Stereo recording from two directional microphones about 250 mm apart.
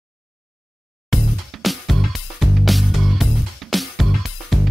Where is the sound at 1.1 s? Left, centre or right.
Centre.